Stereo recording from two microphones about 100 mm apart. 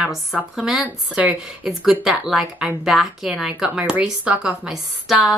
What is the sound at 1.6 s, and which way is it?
Speech, 5° right (ahead or behind).